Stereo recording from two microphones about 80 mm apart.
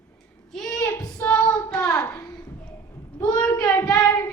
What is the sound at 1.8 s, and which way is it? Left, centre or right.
Hands, left.